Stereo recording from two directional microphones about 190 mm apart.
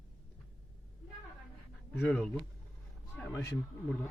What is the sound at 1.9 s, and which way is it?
Speech, 5° left (ahead or behind).